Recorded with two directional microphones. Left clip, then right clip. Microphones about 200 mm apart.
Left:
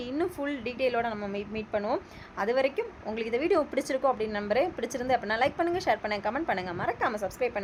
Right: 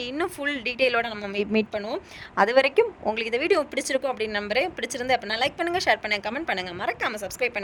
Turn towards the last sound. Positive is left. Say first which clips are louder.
# right 2 dB
turn(degrees=-50)  # may be behind; listen again after turning